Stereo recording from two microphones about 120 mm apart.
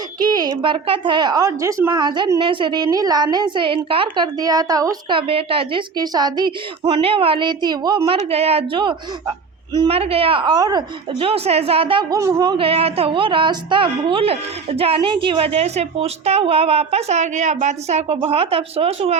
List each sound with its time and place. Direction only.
0.6 s a woman's voice: 45° right (ahead or behind)
1.4 s a woman's voice: 25° right (ahead or behind)
1.9 s a woman's voice: 40° right (ahead or behind)
5.1 s a woman's voice: 50° right (ahead or behind)
6.0 s a woman's voice: 35° right (ahead or behind)
8.1 s a woman's voice: 55° right (ahead or behind)
9.9 s a woman's voice: 55° right (ahead or behind); by 10.8 s 35° right (ahead or behind)
11.2 s a woman's voice: 55° right (ahead or behind)
12.1 s a woman's voice: 30° right (ahead or behind)
12.5 s a woman's voice: 50° right (ahead or behind)
18.2 s a woman's voice: 55° right (ahead or behind)